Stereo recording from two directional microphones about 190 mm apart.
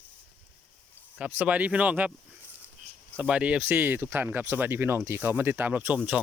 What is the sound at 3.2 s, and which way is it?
Speech, 5° right (ahead or behind).